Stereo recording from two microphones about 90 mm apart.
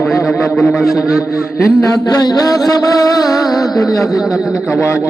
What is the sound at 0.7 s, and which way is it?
Music, centre (ahead or behind).